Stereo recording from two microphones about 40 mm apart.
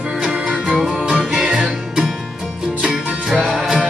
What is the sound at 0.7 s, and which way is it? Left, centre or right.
Music, centre.